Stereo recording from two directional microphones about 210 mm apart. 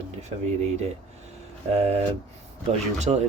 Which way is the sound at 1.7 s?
30° right (ahead or behind).